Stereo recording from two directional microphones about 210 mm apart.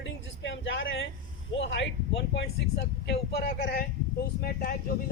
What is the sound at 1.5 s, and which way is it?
A man's voice, 60° left (ahead or behind).